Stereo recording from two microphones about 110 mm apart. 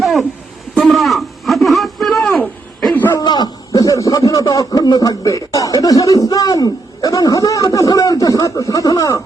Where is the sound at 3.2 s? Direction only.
40° left (ahead or behind).